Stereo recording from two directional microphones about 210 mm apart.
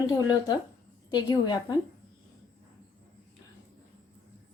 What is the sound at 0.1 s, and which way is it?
A woman's voice, 20° left (ahead or behind).